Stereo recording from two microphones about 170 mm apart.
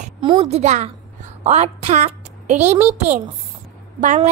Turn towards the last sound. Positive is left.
turn(degrees=-45)  # may be behind; listen again after turning